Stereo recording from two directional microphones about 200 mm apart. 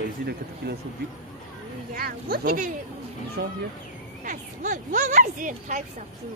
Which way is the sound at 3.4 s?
55° right (ahead or behind).